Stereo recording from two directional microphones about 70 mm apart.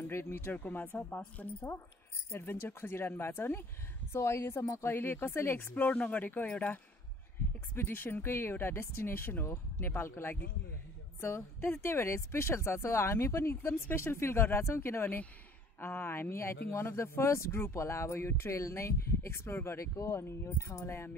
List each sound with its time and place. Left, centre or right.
0.0 s speech: left; by 6.7 s centre
7.7 s speech: left